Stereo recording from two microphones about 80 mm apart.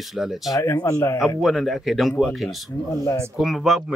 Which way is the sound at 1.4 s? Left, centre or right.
Centre.